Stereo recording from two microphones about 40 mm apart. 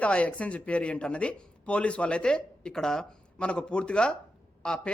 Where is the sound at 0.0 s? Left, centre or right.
Left; by 3.1 s centre.